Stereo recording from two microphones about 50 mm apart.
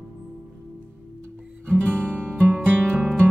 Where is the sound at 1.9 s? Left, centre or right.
Right.